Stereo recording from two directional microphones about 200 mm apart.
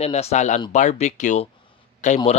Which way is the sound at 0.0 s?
30° left (ahead or behind).